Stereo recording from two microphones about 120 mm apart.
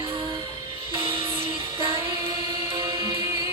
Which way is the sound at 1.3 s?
50° right (ahead or behind).